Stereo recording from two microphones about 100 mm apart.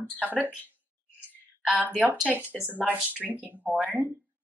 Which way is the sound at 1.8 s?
15° right (ahead or behind).